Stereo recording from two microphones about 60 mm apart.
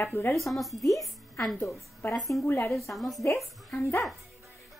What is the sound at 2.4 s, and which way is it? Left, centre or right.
Speech, left.